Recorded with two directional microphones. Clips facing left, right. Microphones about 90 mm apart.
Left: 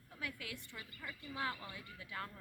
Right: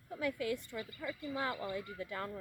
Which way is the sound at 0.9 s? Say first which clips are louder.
Right 6 dB; 20° right (ahead or behind).